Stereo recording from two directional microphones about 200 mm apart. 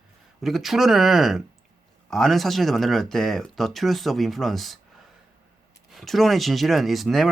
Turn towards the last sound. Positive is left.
turn(degrees=0)  # may be behind; listen again after turning